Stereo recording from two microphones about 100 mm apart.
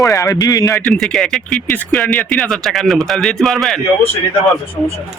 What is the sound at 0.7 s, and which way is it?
A man's voice, 5° left (ahead or behind).